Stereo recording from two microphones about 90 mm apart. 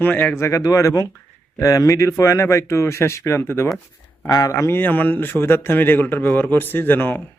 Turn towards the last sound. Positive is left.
turn(degrees=20)  # may be behind; listen again after turning